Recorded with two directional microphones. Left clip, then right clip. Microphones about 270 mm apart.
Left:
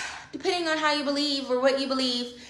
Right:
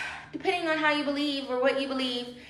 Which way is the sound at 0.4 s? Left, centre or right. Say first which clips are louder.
Left 1 dB; centre.